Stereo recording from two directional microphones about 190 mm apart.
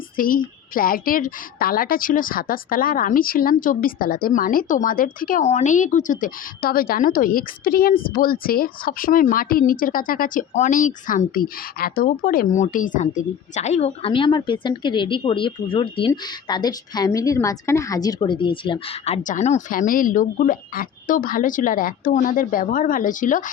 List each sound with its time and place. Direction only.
0.2 s a woman's voice: 45° left (ahead or behind)